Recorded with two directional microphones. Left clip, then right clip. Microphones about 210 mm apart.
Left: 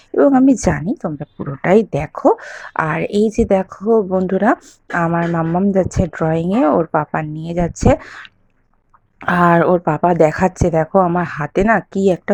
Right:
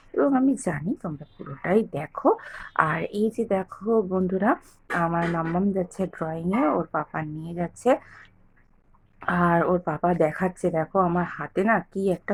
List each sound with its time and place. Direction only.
0.2 s speech: 35° left (ahead or behind)